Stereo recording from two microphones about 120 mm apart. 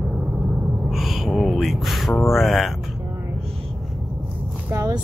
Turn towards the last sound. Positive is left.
turn(degrees=-25)  # may be behind; listen again after turning